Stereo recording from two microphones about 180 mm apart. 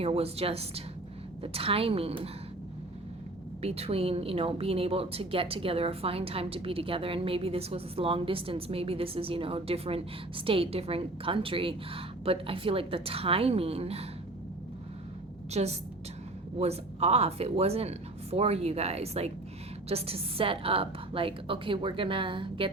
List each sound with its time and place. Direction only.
0.0 s a woman's voice: 35° right (ahead or behind)
3.6 s a woman's voice: 35° right (ahead or behind)
15.5 s a woman's voice: 35° right (ahead or behind)